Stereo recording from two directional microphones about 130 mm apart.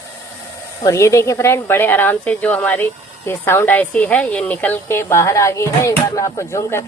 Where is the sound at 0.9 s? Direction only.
20° left (ahead or behind).